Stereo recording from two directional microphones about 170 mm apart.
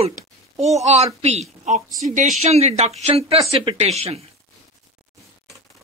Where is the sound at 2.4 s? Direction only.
40° right (ahead or behind).